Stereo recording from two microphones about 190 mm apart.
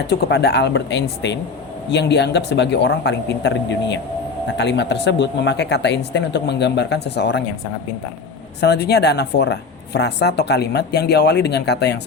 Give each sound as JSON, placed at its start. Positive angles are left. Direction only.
{"t": 0.1, "sound": "speech", "side_deg": 60}
{"t": 8.6, "sound": "speech", "side_deg": 60}